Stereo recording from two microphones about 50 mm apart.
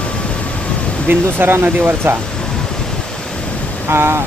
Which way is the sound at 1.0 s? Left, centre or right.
Right.